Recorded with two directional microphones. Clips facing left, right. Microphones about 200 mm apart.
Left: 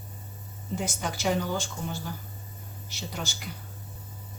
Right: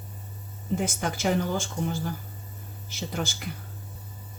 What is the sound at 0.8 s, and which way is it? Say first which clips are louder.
Speech: right 1 dB; 55° right (ahead or behind).